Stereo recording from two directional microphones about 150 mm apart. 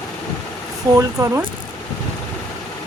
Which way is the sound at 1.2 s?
25° right (ahead or behind).